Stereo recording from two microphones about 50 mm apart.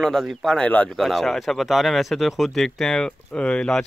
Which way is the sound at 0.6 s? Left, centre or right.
Left.